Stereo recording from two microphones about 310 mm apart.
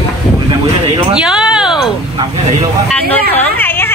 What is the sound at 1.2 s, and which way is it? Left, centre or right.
Speech, centre.